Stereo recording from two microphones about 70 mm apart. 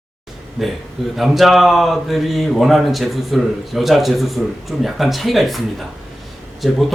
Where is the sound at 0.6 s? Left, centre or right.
Centre.